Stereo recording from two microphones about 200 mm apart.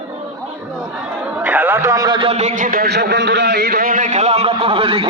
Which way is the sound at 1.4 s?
10° right (ahead or behind).